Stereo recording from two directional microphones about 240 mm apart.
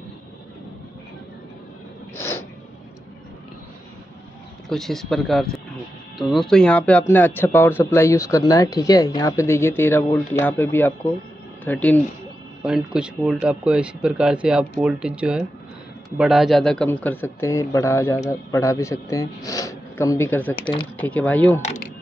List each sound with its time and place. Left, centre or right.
2.1 s snort: centre
4.6 s speech: centre
21.5 s speech: left